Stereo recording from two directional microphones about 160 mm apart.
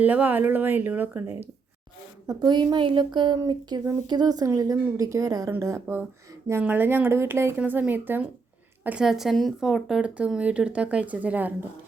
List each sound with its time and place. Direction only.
0.0 s speech: 10° right (ahead or behind)
2.2 s speech: 25° right (ahead or behind)